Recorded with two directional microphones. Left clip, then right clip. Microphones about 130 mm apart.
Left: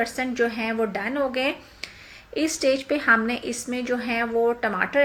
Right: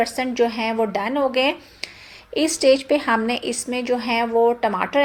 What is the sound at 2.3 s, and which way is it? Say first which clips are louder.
A woman's voice: right 6 dB; 25° right (ahead or behind).